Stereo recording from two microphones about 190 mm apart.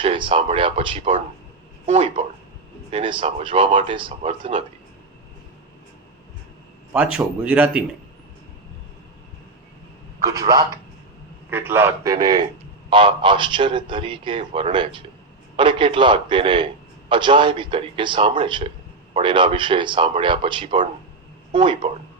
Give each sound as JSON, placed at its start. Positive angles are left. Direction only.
{"t": 0.0, "sound": "a man's voice", "side_deg": -25}
{"t": 6.9, "sound": "speech", "side_deg": -5}
{"t": 10.2, "sound": "a man's voice", "side_deg": -20}